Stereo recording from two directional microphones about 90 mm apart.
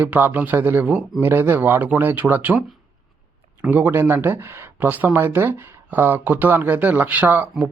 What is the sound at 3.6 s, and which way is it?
Speech, 20° right (ahead or behind).